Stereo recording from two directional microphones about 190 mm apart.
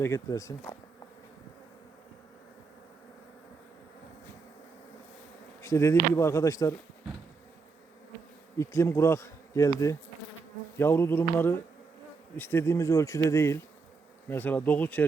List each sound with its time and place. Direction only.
0.0 s bee: 15° left (ahead or behind)
5.6 s bee: 15° left (ahead or behind)
8.5 s bee: 15° left (ahead or behind)